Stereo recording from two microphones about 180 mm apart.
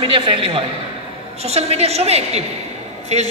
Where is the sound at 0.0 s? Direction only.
30° right (ahead or behind).